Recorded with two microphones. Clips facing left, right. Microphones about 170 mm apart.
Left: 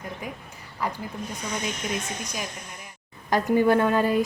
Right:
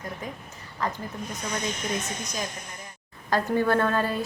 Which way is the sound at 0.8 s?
10° left (ahead or behind).